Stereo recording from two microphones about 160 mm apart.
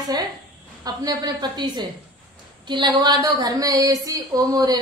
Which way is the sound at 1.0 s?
25° right (ahead or behind).